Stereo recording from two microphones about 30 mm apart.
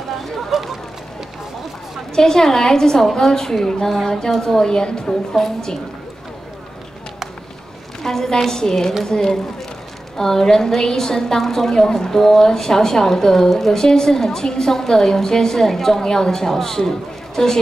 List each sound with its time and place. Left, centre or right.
0.5 s a sound: centre
2.1 s a woman's voice: centre
5.3 s a woman's voice: centre
8.0 s a woman's voice: centre